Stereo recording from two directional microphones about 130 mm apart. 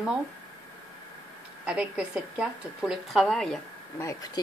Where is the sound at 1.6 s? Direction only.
10° right (ahead or behind).